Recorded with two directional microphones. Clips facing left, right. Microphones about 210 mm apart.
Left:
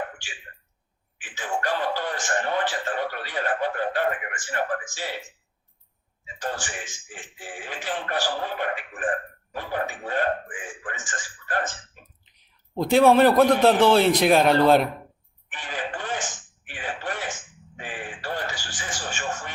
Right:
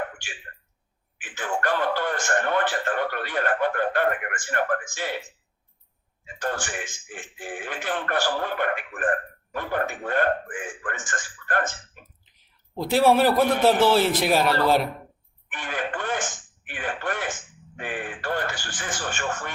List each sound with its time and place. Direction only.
1.2 s a man's voice: 55° right (ahead or behind)
6.2 s a man's voice: 55° right (ahead or behind)
12.8 s a man's voice: 5° right (ahead or behind)
15.4 s a man's voice: 55° right (ahead or behind)